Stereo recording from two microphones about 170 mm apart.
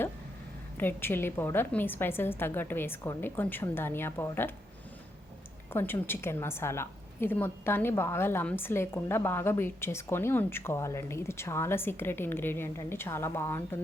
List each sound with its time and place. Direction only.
0.8 s a woman's voice: 10° left (ahead or behind)
5.7 s a woman's voice: 15° left (ahead or behind)